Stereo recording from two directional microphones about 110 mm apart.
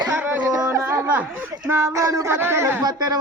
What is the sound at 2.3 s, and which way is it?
Speech, 20° right (ahead or behind).